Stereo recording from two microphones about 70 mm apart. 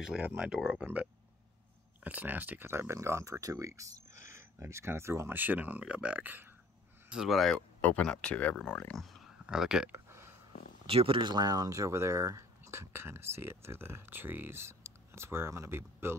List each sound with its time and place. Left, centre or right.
0.4 s speech: centre
2.0 s speech: right
2.7 s speech: right
5.4 s speech: right
7.1 s speech: centre
7.8 s speech: left
9.5 s speech: centre
9.9 s a sound: right
11.2 s speech: right